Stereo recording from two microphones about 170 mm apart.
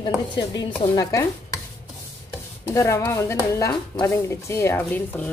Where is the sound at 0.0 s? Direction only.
25° left (ahead or behind).